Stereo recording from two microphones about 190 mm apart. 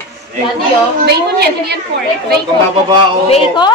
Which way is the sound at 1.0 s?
55° right (ahead or behind).